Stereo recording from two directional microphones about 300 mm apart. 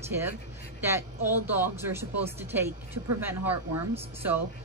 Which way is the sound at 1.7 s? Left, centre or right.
Centre.